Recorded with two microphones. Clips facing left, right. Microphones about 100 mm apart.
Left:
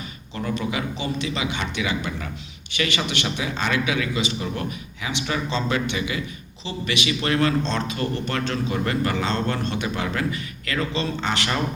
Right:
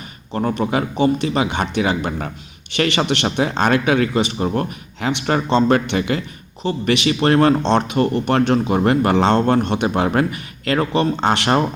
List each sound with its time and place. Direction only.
0.3 s speech: 45° right (ahead or behind)